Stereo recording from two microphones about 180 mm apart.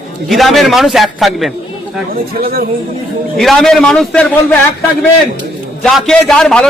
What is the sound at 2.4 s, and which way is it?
Speech, 55° right (ahead or behind).